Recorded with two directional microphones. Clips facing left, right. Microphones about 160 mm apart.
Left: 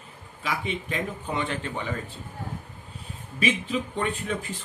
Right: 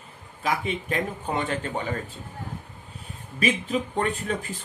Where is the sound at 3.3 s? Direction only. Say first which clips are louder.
Right 1 dB; 40° right (ahead or behind).